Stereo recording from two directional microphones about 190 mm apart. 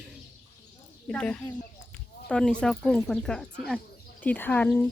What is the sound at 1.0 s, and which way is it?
Speech, 5° left (ahead or behind).